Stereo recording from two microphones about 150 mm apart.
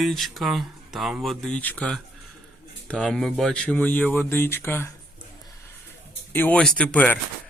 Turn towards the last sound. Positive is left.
turn(degrees=10)  # may be behind; listen again after turning